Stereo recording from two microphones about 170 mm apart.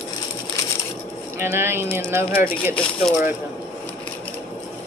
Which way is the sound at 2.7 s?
5° left (ahead or behind).